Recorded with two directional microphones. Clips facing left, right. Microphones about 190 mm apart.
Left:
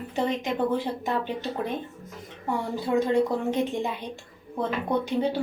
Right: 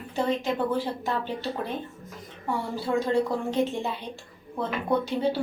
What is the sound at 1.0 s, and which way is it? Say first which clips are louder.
Speech: left 1 dB; 15° left (ahead or behind).